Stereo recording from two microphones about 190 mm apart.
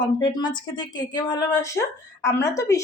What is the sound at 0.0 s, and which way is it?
A woman's voice, 20° left (ahead or behind).